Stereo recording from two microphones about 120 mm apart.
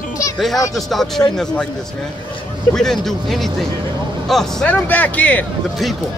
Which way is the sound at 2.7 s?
5° left (ahead or behind).